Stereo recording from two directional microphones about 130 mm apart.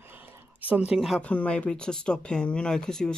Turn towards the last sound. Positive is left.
turn(degrees=5)  # may be behind; listen again after turning